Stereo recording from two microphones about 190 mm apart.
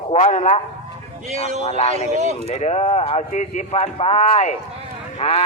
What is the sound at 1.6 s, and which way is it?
A man's voice, 30° left (ahead or behind).